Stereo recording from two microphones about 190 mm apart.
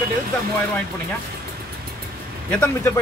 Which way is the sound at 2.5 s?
10° left (ahead or behind).